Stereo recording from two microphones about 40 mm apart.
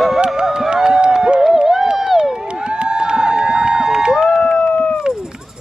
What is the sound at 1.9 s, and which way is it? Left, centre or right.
Run, centre.